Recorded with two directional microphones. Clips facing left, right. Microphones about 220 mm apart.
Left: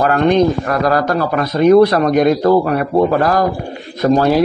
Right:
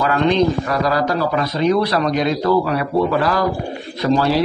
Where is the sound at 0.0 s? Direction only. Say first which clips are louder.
Left 4 dB; 50° left (ahead or behind).